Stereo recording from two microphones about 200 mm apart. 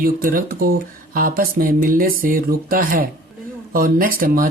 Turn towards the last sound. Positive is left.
turn(degrees=-45)  # may be behind; listen again after turning